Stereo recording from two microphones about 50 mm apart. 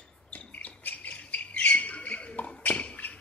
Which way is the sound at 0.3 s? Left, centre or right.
Left.